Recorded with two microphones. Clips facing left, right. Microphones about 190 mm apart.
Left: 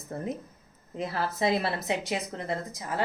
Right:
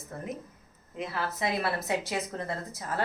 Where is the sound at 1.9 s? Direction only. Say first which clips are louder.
Left 1 dB; 20° left (ahead or behind).